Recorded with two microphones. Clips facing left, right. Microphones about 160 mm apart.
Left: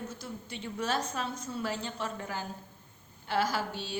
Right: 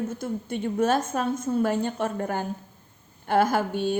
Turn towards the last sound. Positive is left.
turn(degrees=-55)  # may be behind; listen again after turning